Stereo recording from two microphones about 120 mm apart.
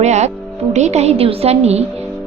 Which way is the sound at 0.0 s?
70° right (ahead or behind).